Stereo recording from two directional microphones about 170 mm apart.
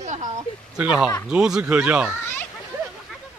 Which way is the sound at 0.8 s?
10° right (ahead or behind).